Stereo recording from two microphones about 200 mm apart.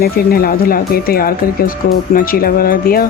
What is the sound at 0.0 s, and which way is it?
Speech, 50° left (ahead or behind).